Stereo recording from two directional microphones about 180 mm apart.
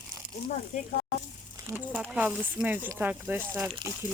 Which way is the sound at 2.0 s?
5° right (ahead or behind).